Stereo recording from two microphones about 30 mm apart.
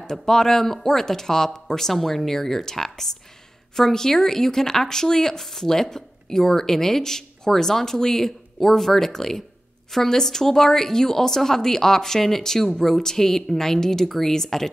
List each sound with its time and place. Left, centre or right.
0.0 s speech: centre